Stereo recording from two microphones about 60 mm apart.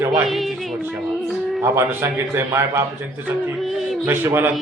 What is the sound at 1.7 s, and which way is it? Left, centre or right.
A man's voice, right.